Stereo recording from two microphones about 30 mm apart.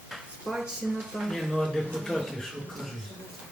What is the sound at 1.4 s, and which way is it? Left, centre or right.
Speech, centre.